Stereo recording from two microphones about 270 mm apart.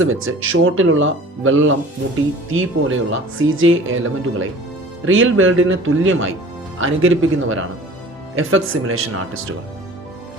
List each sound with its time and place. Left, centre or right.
0.0 s speech: right